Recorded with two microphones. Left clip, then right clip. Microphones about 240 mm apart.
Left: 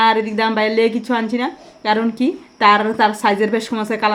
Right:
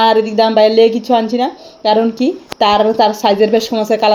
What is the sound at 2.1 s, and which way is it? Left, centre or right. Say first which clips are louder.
A woman's voice: right 5 dB; left.